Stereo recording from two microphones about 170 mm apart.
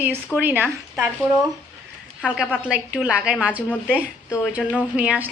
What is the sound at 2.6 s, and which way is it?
Speech, 5° right (ahead or behind).